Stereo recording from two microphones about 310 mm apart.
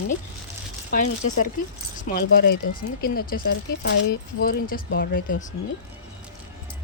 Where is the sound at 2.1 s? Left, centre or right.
Left.